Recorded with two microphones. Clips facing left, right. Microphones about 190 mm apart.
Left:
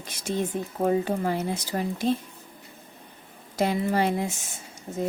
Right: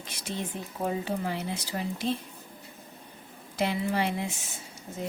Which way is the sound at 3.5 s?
45° left (ahead or behind).